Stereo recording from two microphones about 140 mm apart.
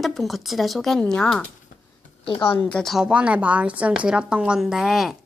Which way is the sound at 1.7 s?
70° left (ahead or behind).